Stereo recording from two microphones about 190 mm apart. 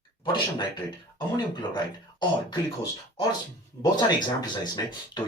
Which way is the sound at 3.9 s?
20° left (ahead or behind).